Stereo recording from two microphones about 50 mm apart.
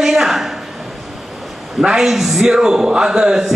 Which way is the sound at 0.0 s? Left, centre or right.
Centre.